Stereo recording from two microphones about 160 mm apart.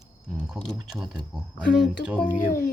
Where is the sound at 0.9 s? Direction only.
5° right (ahead or behind).